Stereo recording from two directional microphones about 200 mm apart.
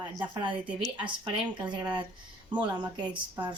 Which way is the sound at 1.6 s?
25° right (ahead or behind).